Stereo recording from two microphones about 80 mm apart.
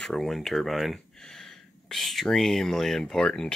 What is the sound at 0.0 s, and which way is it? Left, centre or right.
Speech, centre.